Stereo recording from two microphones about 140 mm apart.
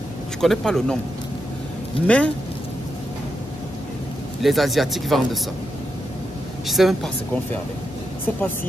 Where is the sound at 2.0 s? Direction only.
10° left (ahead or behind).